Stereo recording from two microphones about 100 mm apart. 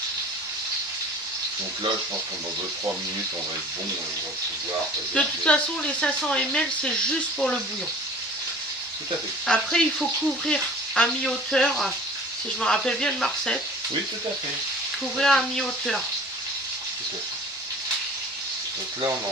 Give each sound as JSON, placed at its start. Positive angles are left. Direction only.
{"t": 5.1, "sound": "speech", "side_deg": 10}
{"t": 9.5, "sound": "frying", "side_deg": 5}
{"t": 12.5, "sound": "speech", "side_deg": 5}
{"t": 15.2, "sound": "frying", "side_deg": 5}